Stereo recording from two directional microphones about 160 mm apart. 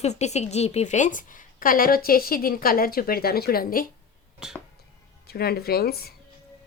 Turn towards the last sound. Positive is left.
turn(degrees=75)  # may be behind; listen again after turning